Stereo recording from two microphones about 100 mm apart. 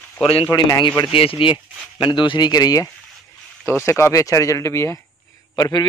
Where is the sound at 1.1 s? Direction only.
65° left (ahead or behind); by 2.9 s 40° left (ahead or behind).